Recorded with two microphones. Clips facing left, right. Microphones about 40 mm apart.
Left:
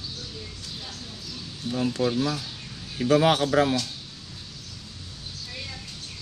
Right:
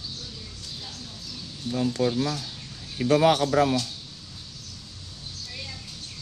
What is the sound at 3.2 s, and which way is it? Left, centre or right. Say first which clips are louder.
Speech: right 1 dB; left.